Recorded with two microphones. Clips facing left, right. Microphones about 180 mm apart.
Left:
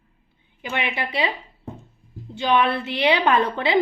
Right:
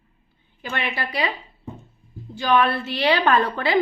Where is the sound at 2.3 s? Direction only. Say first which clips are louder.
Even; 20° left (ahead or behind).